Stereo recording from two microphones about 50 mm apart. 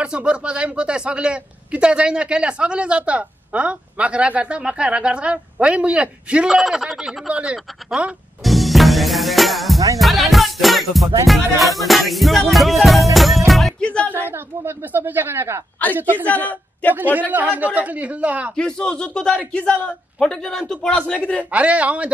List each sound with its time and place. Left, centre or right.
0.0 s speech: right
6.5 s music: centre
6.8 s speech: centre
8.5 s music: centre
13.7 s music: left
14.3 s a woman's voice: right
16.0 s a woman's voice: right
16.3 s a man's voice: left
16.9 s a man's voice: right
18.6 s speech: centre
21.2 s a man's voice: left
21.5 s speech: right